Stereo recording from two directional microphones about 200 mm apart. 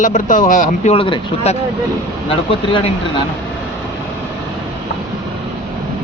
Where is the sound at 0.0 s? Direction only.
40° left (ahead or behind).